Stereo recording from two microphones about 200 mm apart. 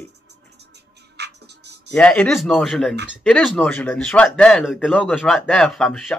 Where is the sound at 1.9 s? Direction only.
5° left (ahead or behind).